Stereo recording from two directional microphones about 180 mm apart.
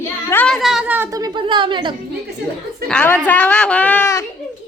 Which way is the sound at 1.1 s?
25° right (ahead or behind).